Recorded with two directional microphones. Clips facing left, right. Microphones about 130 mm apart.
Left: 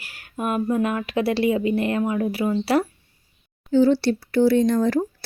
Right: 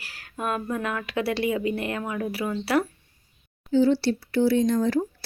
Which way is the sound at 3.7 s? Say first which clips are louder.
Left 3 dB; 55° left (ahead or behind).